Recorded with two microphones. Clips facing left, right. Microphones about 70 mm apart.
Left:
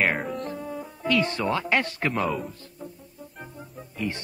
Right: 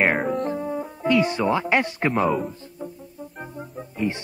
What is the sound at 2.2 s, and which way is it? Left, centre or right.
Speech, centre.